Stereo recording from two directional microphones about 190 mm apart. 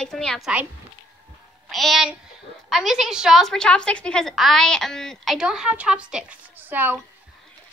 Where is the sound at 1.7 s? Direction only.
Centre (ahead or behind).